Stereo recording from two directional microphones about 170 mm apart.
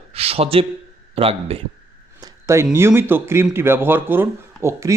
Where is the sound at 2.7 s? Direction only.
15° right (ahead or behind).